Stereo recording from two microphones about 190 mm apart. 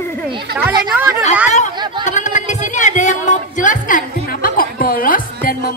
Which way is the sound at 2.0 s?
40° left (ahead or behind).